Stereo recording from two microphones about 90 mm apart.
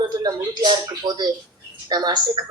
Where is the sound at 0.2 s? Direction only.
50° right (ahead or behind).